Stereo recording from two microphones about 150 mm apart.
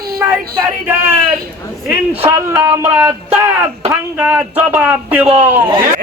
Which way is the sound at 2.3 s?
20° right (ahead or behind).